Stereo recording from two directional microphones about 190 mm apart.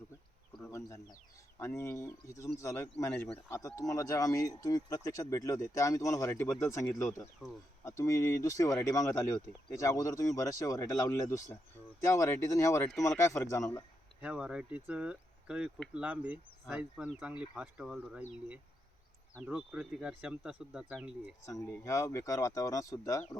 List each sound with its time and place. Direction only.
1.5 s speech: 15° left (ahead or behind)
7.4 s speech: 5° right (ahead or behind)
7.9 s speech: 15° left (ahead or behind)
14.2 s speech: 5° right (ahead or behind)
19.5 s speech: 5° right (ahead or behind)
21.4 s speech: 15° left (ahead or behind)